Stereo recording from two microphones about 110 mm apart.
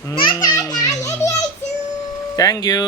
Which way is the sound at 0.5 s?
35° left (ahead or behind).